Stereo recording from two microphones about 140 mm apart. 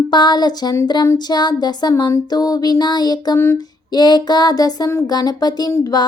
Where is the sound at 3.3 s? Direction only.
20° left (ahead or behind).